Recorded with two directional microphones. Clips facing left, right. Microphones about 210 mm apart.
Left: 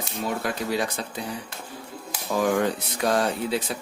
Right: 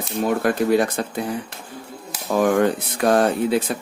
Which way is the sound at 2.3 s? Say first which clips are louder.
Right 5 dB; 55° right (ahead or behind).